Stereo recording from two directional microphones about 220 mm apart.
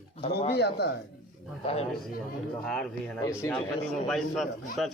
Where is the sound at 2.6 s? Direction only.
5° left (ahead or behind).